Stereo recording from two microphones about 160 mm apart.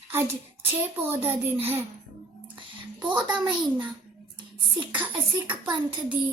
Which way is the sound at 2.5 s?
30° right (ahead or behind).